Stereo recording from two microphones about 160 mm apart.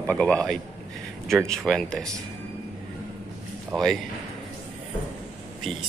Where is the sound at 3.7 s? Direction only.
Centre (ahead or behind).